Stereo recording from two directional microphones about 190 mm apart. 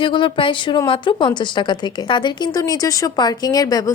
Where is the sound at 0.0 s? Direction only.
25° left (ahead or behind).